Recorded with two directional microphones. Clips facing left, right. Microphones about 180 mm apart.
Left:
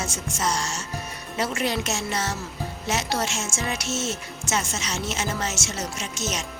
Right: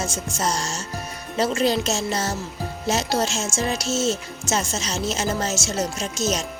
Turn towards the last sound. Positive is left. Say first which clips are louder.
# right 6 dB
turn(degrees=-35)  # may be behind; listen again after turning